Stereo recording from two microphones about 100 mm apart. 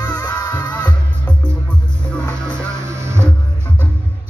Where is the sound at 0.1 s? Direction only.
20° left (ahead or behind).